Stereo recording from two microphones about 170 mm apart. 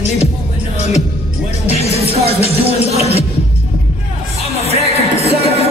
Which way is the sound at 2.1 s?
35° right (ahead or behind).